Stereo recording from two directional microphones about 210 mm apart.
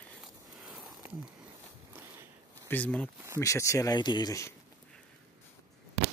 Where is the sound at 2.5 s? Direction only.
10° left (ahead or behind).